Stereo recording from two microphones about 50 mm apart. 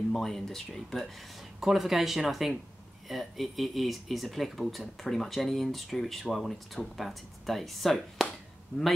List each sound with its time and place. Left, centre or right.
0.1 s speech: centre